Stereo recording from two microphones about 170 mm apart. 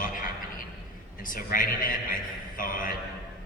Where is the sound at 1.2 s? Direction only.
55° left (ahead or behind).